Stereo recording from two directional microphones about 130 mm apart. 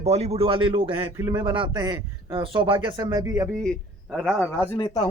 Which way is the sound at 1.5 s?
40° right (ahead or behind).